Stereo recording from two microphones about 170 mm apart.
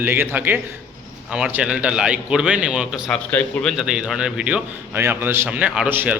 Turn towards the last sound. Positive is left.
turn(degrees=-10)  # may be behind; listen again after turning